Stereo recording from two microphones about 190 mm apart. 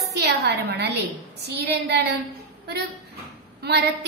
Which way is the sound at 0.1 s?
60° right (ahead or behind).